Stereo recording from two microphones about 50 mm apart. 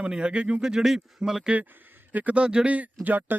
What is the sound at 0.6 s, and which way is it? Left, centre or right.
Speech, centre.